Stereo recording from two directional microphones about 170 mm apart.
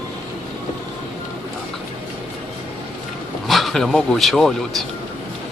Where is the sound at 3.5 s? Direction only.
Centre (ahead or behind).